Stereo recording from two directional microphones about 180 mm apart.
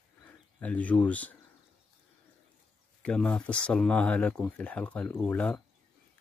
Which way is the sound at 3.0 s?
5° left (ahead or behind).